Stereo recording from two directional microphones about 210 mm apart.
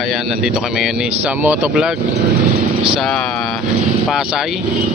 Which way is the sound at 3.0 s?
Centre (ahead or behind).